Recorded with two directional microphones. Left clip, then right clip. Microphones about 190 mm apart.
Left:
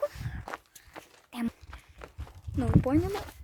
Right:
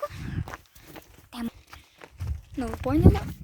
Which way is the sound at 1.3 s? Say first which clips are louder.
Even; centre (ahead or behind).